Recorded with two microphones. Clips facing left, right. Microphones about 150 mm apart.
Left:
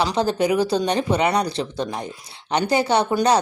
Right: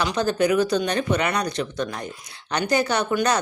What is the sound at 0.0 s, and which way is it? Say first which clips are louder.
Speech: left 1 dB; 30° left (ahead or behind).